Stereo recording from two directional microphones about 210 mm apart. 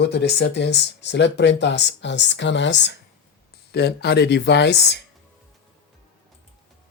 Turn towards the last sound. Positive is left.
turn(degrees=55)  # may be behind; listen again after turning